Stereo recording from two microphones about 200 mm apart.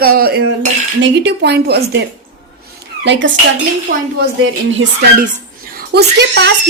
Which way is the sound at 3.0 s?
65° right (ahead or behind).